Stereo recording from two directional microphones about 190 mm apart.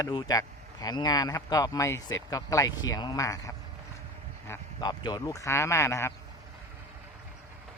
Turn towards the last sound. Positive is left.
turn(degrees=15)  # may be behind; listen again after turning